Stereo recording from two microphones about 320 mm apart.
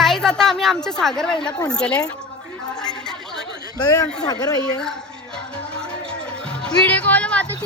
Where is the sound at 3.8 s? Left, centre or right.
Centre.